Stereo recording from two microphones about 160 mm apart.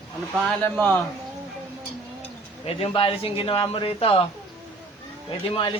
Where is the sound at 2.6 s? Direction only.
35° left (ahead or behind).